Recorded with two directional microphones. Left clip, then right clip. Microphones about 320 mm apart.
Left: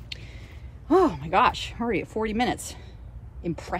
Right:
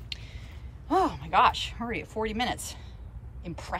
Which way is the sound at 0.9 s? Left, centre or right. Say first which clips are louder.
Left 5 dB; centre.